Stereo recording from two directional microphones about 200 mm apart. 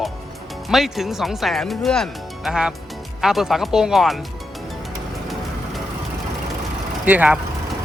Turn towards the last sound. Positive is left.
turn(degrees=-5)  # may be behind; listen again after turning